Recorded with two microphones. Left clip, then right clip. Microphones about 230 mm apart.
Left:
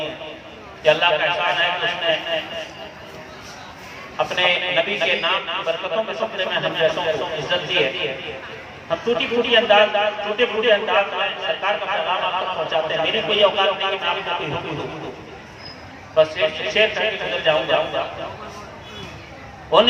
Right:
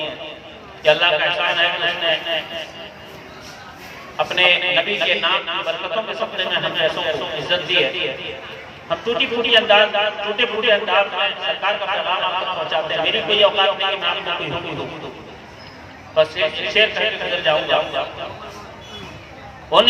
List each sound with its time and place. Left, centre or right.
0.8 s a man's voice: right
4.2 s a man's voice: right
8.9 s a man's voice: right
16.1 s a man's voice: right
19.7 s a man's voice: right